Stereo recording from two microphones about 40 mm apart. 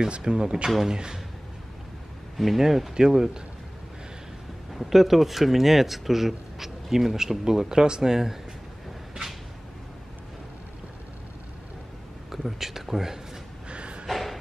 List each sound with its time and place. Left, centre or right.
0.1 s speech: right
2.3 s speech: centre
4.7 s speech: centre
12.3 s speech: centre
13.7 s a sound: right
14.0 s a sound: centre